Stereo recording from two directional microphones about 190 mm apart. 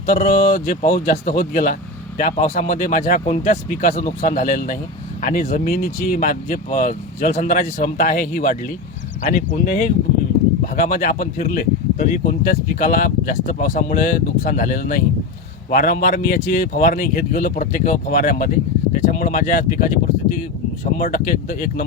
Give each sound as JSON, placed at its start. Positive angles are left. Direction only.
{"t": 0.0, "sound": "speech", "side_deg": 45}
{"t": 9.6, "sound": "speech", "side_deg": 40}
{"t": 21.0, "sound": "speech", "side_deg": 45}